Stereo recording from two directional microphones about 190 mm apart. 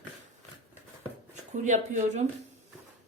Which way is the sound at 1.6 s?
40° right (ahead or behind).